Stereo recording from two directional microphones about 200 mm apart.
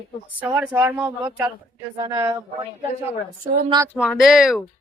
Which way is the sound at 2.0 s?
15° right (ahead or behind).